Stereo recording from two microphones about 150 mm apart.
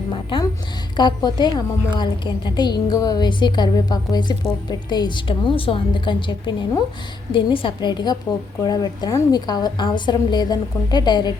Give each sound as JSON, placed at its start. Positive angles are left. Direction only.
{"t": 0.1, "sound": "a woman's voice", "side_deg": 35}